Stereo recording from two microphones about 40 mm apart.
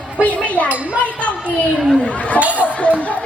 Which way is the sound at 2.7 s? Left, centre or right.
Left.